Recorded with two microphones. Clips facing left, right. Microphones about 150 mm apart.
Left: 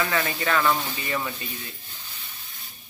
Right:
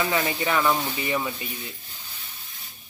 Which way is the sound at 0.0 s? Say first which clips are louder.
Right 1 dB; 20° right (ahead or behind).